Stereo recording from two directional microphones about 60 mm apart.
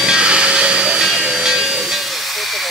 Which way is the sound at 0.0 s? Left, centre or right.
Centre.